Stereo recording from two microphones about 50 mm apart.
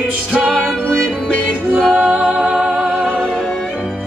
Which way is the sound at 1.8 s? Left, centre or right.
Right.